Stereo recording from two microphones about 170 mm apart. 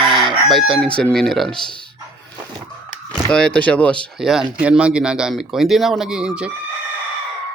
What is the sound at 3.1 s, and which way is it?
Speech, 5° left (ahead or behind).